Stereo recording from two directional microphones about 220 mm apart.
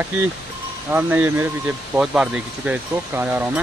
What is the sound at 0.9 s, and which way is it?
Speech, 10° right (ahead or behind).